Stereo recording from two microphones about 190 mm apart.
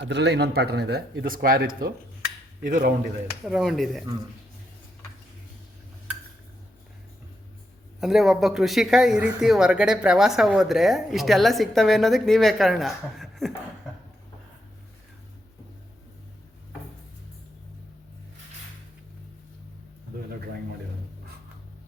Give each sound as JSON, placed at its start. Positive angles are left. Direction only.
{"t": 0.0, "sound": "speech", "side_deg": -65}
{"t": 3.4, "sound": "speech", "side_deg": 0}
{"t": 8.0, "sound": "speech", "side_deg": 0}